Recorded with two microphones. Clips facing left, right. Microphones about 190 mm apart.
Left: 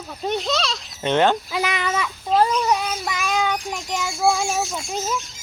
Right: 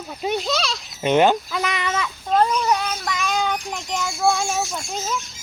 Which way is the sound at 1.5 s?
5° left (ahead or behind).